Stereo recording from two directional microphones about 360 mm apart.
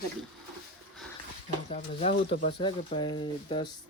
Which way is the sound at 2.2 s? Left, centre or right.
Left.